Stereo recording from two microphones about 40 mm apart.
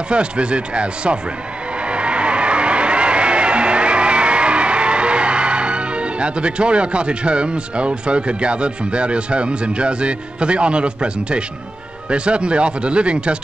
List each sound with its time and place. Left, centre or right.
0.1 s speech: right
1.9 s music: right
12.1 s speech: right